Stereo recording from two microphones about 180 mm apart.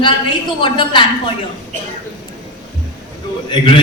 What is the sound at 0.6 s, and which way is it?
Speech, 25° left (ahead or behind).